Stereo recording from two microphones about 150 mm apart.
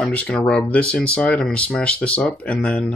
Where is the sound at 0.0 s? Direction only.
10° left (ahead or behind).